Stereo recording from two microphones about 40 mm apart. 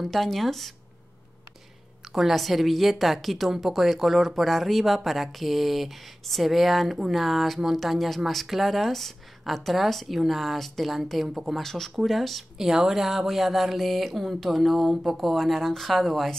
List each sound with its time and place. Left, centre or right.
0.0 s speech: centre
2.1 s speech: centre
11.5 s speech: centre